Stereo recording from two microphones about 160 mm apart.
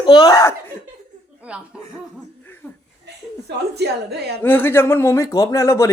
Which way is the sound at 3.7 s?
90° right.